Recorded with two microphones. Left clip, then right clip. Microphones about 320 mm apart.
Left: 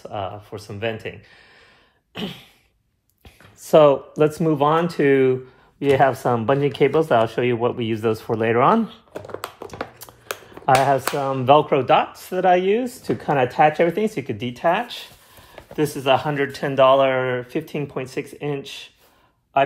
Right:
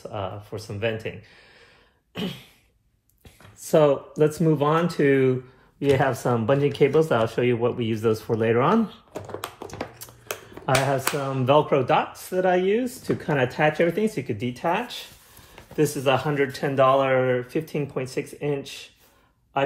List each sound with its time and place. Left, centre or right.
0.1 s speech: left
2.1 s speech: left
3.6 s speech: left
9.1 s computer keyboard: centre
10.7 s speech: left